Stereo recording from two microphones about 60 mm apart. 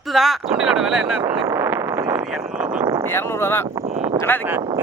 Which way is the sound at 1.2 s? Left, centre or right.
Right.